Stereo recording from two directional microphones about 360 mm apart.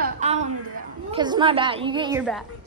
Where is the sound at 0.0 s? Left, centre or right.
Centre.